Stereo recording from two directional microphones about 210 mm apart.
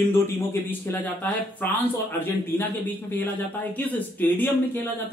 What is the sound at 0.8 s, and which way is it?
A man's voice, 10° left (ahead or behind).